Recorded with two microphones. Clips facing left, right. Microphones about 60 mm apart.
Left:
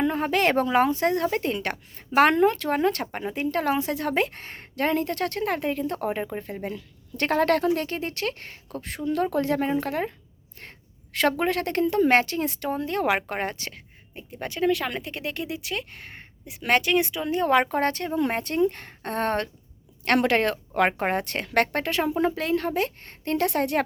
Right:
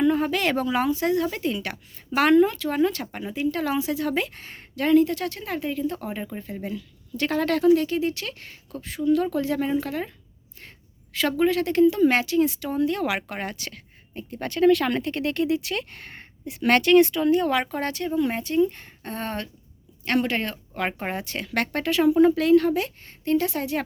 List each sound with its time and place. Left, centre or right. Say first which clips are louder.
0.0 s a woman's voice: right 1 dB; left
11.1 s a woman's voice: right 1 dB; left
14.2 s speech: right 5 dB; centre
17.2 s speech: even; left
20.1 s a woman's voice: left 3 dB; left
23.0 s speech: right 2 dB; left